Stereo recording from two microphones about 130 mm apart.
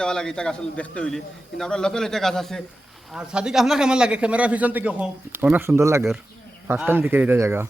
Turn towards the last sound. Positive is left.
turn(degrees=-20)  # may be behind; listen again after turning